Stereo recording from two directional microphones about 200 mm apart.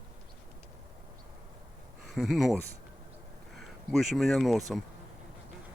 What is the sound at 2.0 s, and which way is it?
Speech, centre (ahead or behind).